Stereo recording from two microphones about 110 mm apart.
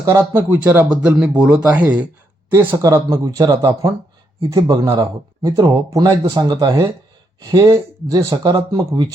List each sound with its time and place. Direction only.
0.0 s speech: 30° right (ahead or behind)
0.3 s speech: 15° right (ahead or behind)
2.5 s speech: 25° right (ahead or behind)